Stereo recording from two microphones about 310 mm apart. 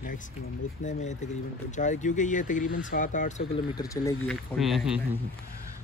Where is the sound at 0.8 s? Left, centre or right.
Left; by 5.0 s centre.